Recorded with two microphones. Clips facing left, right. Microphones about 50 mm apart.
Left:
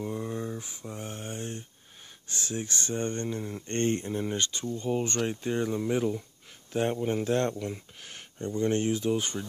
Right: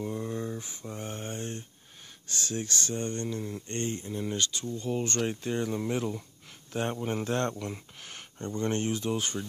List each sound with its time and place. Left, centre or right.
0.0 s a sound: centre
2.2 s speech: centre
3.6 s speech: left
4.1 s speech: left